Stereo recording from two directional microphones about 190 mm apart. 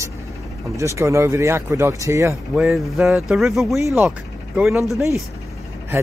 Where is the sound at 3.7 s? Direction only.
15° right (ahead or behind).